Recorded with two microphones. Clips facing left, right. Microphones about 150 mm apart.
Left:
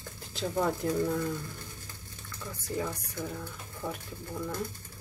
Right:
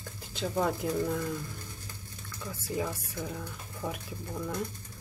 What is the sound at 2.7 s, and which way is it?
Speech, 10° right (ahead or behind).